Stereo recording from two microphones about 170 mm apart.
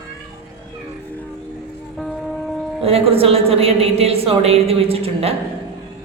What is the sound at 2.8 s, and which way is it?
A man's voice, 35° right (ahead or behind).